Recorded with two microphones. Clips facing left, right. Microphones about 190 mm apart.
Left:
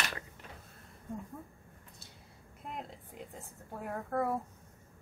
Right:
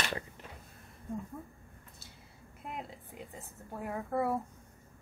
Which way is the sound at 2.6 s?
5° right (ahead or behind).